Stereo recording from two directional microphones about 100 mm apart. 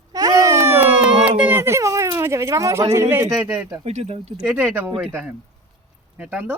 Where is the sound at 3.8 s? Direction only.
90° right.